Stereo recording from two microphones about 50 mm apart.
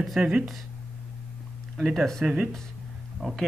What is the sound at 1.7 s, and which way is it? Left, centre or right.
Speech, centre.